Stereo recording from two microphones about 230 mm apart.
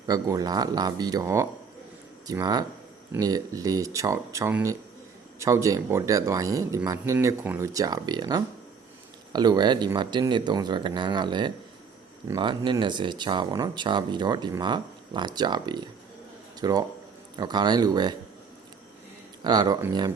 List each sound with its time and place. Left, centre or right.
0.1 s speech: centre
19.5 s speech: centre